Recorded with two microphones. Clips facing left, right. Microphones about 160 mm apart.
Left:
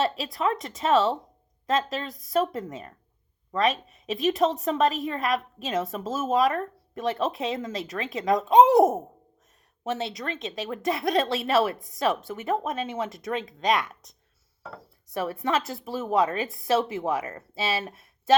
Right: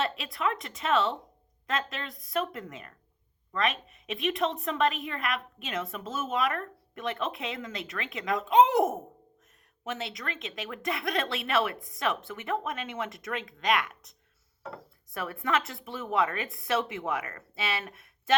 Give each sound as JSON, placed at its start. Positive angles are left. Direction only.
{"t": 0.0, "sound": "a woman's voice", "side_deg": 35}
{"t": 15.1, "sound": "a woman's voice", "side_deg": 30}